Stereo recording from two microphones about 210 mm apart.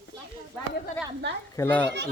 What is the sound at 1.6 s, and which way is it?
Speech, 10° left (ahead or behind).